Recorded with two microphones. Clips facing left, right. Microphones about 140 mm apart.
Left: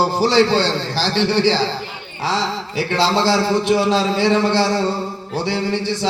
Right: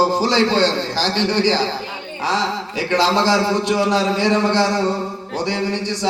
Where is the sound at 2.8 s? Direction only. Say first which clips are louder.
Even; 15° right (ahead or behind).